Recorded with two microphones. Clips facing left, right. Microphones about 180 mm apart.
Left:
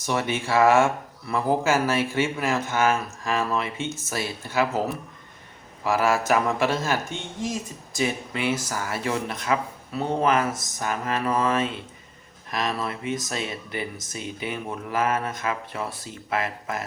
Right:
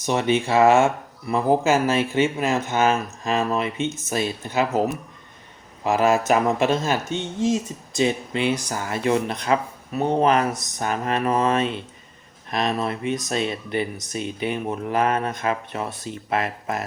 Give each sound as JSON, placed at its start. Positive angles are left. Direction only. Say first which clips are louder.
{"t": 0.0, "sound": "speech", "louder": "right 5 dB", "side_deg": -20}
{"t": 5.8, "sound": "speech", "louder": "right 3 dB", "side_deg": -20}